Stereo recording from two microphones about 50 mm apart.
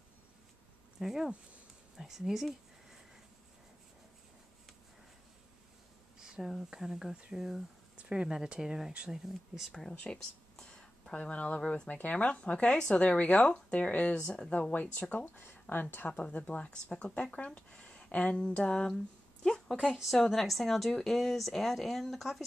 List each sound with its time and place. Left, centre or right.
0.9 s speech: centre
6.1 s a sound: centre
6.7 s speech: centre
7.9 s a woman's voice: right; by 9.8 s centre
9.8 s speech: centre
10.5 s a sound: centre
11.6 s speech: left
15.2 s a woman's voice: left
16.1 s speech: left
20.2 s a woman's voice: centre